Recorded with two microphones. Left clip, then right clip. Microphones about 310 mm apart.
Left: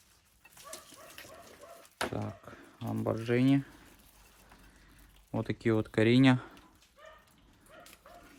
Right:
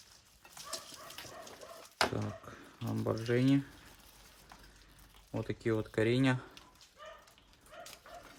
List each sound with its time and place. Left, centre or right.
2.1 s speech: centre
5.3 s speech: centre